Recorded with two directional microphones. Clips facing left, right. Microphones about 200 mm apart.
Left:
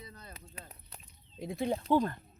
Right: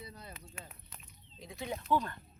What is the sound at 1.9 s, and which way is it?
Speech, 45° left (ahead or behind).